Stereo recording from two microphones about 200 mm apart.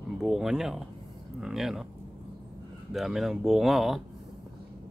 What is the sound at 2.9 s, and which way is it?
Speech, centre (ahead or behind).